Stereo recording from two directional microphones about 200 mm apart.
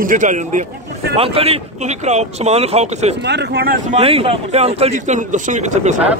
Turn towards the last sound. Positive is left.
turn(degrees=-40)  # may be behind; listen again after turning